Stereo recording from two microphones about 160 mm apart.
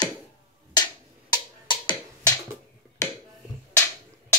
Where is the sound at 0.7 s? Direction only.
25° left (ahead or behind).